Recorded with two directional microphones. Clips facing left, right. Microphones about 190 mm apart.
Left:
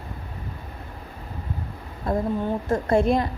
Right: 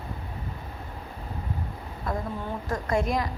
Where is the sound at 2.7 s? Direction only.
30° left (ahead or behind).